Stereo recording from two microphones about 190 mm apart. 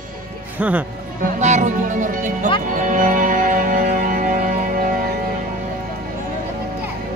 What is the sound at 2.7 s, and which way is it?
Music, 45° right (ahead or behind).